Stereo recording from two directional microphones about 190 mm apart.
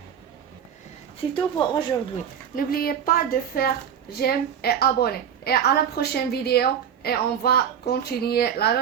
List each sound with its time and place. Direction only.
1.2 s a woman's voice: 25° left (ahead or behind)
2.6 s a woman's voice: 50° left (ahead or behind)